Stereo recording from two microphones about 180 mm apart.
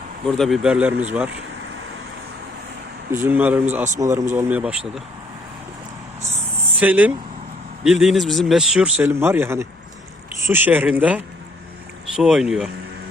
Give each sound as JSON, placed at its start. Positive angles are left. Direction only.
{"t": 0.3, "sound": "speech", "side_deg": 0}
{"t": 3.1, "sound": "speech", "side_deg": -10}
{"t": 6.7, "sound": "speech", "side_deg": -10}